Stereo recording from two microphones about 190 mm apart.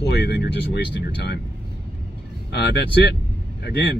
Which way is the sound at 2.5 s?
60° left (ahead or behind).